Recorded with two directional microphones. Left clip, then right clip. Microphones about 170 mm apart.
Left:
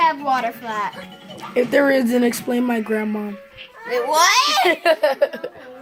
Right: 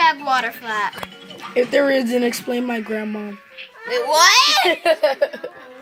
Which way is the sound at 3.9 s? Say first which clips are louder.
Right 2 dB; 5° left (ahead or behind).